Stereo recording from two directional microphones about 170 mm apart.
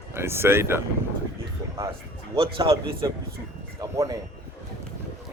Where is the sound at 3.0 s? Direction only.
20° right (ahead or behind).